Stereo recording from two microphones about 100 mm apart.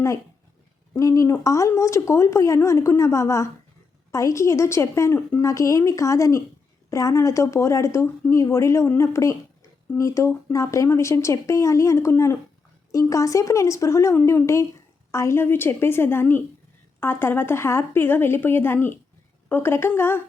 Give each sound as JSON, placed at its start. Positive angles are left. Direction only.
{"t": 0.9, "sound": "a woman's voice", "side_deg": 30}